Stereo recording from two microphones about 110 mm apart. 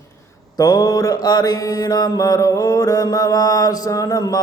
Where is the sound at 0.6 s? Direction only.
35° left (ahead or behind).